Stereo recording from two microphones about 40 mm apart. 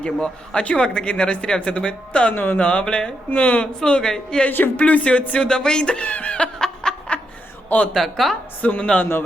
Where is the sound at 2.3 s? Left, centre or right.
Left.